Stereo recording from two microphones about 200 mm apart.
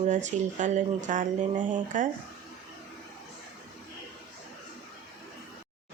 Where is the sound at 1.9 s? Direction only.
40° right (ahead or behind).